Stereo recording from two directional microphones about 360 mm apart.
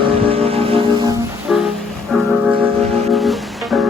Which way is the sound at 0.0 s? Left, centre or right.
Centre.